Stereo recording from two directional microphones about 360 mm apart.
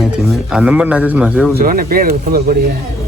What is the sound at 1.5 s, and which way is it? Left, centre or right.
Speech, right.